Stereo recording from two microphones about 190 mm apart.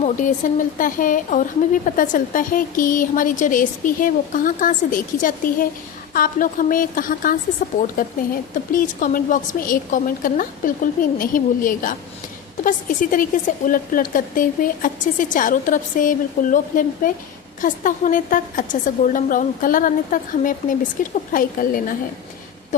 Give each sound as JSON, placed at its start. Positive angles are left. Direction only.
{"t": 0.0, "sound": "a woman's voice", "side_deg": 40}